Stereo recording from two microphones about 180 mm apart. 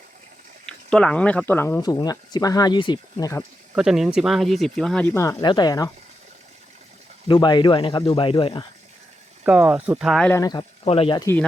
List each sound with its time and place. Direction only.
0.6 s speech: 5° left (ahead or behind)
3.8 s speech: 5° right (ahead or behind); by 5.9 s 20° left (ahead or behind)
7.3 s speech: 25° left (ahead or behind)
9.4 s speech: 5° right (ahead or behind)
10.3 s speech: 20° left (ahead or behind)
10.8 s speech: 30° left (ahead or behind)